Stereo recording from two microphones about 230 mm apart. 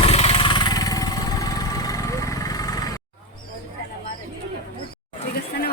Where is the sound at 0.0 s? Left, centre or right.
Left.